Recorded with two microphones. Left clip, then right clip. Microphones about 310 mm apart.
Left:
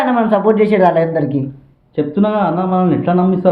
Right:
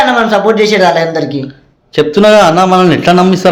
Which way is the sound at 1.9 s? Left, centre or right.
Right.